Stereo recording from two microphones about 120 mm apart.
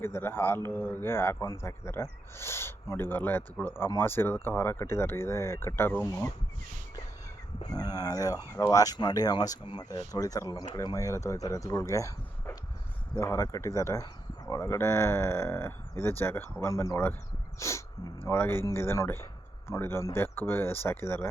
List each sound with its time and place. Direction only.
0.0 s a man's voice: 20° left (ahead or behind)
7.7 s speech: 30° left (ahead or behind)
10.0 s a man's voice: 30° left (ahead or behind)